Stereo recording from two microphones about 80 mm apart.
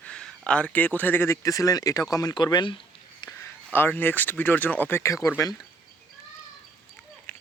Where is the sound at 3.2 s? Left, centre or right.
Left.